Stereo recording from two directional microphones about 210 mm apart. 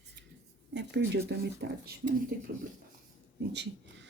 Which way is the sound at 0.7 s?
55° right (ahead or behind).